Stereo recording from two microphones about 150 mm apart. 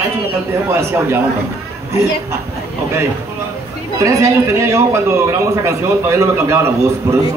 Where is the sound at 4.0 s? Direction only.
20° right (ahead or behind).